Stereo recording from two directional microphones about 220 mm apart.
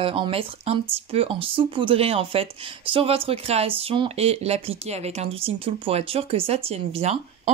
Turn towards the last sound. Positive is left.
turn(degrees=-30)  # may be behind; listen again after turning